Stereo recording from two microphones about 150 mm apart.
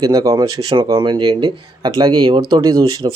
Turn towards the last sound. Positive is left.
turn(degrees=-20)  # may be behind; listen again after turning